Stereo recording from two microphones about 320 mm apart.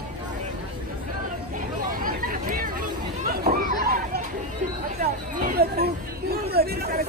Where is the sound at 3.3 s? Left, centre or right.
Right.